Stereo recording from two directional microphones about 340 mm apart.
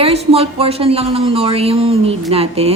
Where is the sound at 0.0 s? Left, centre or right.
Centre.